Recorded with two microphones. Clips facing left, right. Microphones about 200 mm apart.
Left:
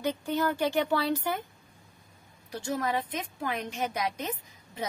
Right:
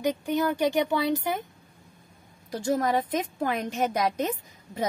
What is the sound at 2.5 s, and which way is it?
A woman's voice, 40° right (ahead or behind).